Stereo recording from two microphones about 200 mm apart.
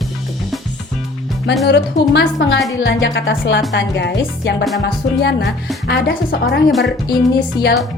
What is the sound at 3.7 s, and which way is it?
Speech, 60° left (ahead or behind).